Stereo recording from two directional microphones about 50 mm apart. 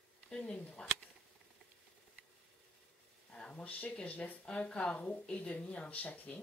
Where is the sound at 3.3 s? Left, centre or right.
Centre.